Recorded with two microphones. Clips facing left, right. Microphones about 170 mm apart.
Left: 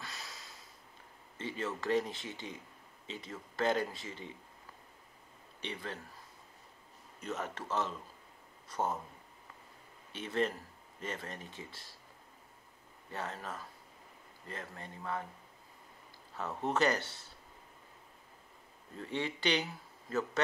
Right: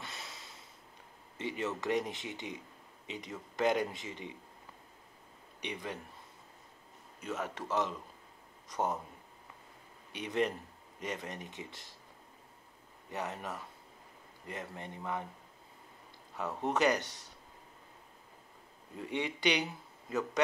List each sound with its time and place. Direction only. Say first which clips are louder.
0.0 s a sound: right 1 dB; 25° right (ahead or behind)
1.4 s speech: right 2 dB; 20° right (ahead or behind)
5.6 s speech: right 2 dB; 15° right (ahead or behind)
7.2 s speech: right 1 dB; 10° right (ahead or behind)
10.1 s speech: right 1 dB; 15° right (ahead or behind)
13.1 s speech: right 2 dB; 15° right (ahead or behind)
16.3 s speech: right 1 dB; 15° right (ahead or behind)
18.9 s speech: right 1 dB; 15° right (ahead or behind)